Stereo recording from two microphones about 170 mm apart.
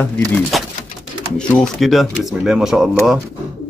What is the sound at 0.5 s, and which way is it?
A man's voice, centre (ahead or behind).